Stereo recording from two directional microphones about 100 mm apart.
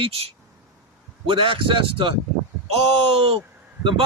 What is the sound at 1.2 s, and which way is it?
Speech, 60° right (ahead or behind).